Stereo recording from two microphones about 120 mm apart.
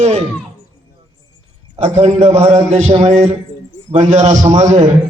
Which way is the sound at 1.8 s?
70° right (ahead or behind).